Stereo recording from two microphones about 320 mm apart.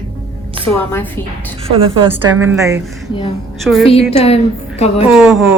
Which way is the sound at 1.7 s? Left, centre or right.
Centre.